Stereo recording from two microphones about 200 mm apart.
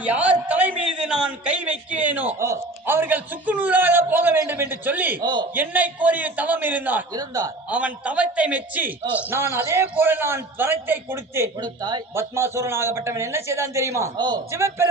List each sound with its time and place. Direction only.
0.0 s a sound: 5° right (ahead or behind)
0.4 s a man's voice: 10° right (ahead or behind)
5.2 s a man's voice: 20° right (ahead or behind)
5.5 s a man's voice: 10° right (ahead or behind)
7.7 s a man's voice: 5° right (ahead or behind)